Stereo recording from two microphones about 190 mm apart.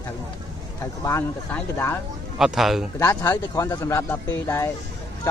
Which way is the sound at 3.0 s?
15° left (ahead or behind).